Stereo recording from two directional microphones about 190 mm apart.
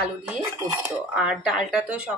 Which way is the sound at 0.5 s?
20° right (ahead or behind).